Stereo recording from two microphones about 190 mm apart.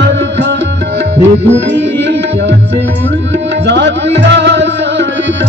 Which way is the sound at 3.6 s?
65° right (ahead or behind).